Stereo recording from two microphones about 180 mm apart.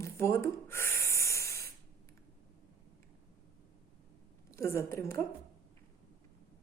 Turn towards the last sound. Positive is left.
turn(degrees=15)  # may be behind; listen again after turning